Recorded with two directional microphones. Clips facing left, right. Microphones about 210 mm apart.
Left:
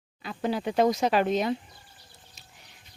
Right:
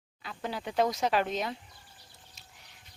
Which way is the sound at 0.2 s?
10° left (ahead or behind).